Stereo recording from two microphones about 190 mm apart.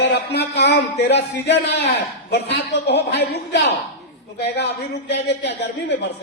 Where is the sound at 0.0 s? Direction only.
60° left (ahead or behind).